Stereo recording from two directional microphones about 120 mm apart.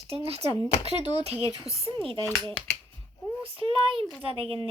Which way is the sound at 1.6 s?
50° right (ahead or behind).